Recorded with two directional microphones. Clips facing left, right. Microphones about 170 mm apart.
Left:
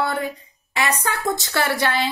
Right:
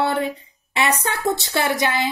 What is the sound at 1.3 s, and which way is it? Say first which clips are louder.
Speech: right 2 dB; 20° right (ahead or behind).